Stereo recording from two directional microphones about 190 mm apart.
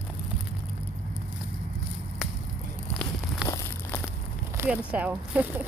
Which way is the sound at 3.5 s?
15° left (ahead or behind).